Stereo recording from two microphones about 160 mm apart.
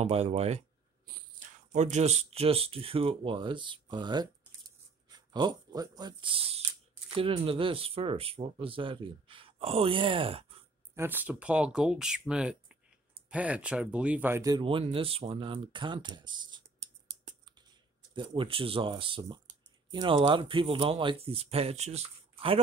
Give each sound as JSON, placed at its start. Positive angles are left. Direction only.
{"t": 0.0, "sound": "speech", "side_deg": -45}
{"t": 1.7, "sound": "speech", "side_deg": -45}
{"t": 5.3, "sound": "speech", "side_deg": -25}
{"t": 11.0, "sound": "speech", "side_deg": -10}
{"t": 14.4, "sound": "speech", "side_deg": -30}
{"t": 18.1, "sound": "speech", "side_deg": -30}